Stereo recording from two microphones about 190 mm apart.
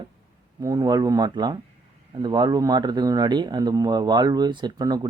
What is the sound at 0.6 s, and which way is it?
Speech, 20° right (ahead or behind).